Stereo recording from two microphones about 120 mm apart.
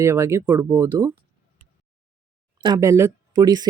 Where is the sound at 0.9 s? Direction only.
35° right (ahead or behind).